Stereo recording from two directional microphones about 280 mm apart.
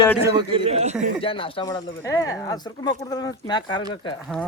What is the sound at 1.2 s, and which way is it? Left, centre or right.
Speech, centre.